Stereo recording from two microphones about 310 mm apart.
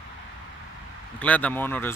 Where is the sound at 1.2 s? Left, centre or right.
Centre.